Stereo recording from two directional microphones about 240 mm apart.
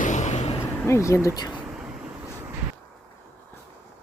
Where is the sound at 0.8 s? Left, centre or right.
Centre.